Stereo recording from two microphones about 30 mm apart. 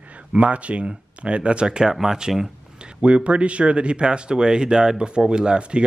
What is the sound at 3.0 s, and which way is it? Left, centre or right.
Speech, right.